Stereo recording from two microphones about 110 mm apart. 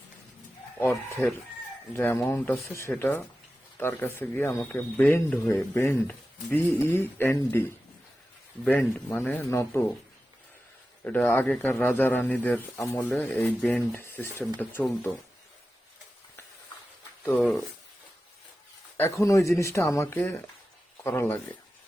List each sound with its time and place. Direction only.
0.8 s speech: 20° left (ahead or behind)
5.5 s speech: 30° left (ahead or behind)
9.1 s speech: 15° left (ahead or behind)
11.0 s speech: 15° left (ahead or behind)
17.3 s speech: 10° left (ahead or behind)
18.9 s speech: 25° left (ahead or behind)